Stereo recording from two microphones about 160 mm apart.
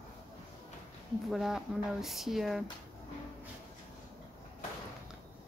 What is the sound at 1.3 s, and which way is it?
A woman's voice, centre (ahead or behind).